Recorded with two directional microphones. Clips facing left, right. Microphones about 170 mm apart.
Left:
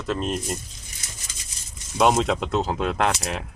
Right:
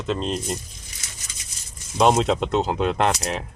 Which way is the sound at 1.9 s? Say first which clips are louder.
Right 2 dB; centre (ahead or behind).